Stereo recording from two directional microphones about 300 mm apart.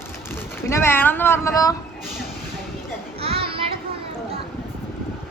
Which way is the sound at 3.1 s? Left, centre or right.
Centre.